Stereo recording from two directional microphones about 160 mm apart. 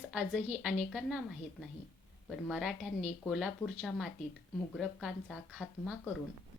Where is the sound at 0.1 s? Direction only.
Centre (ahead or behind).